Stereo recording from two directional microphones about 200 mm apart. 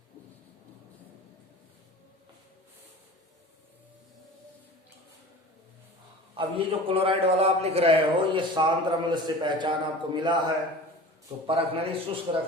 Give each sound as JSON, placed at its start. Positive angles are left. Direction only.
{"t": 6.3, "sound": "a man's voice", "side_deg": -25}
{"t": 11.4, "sound": "a man's voice", "side_deg": -30}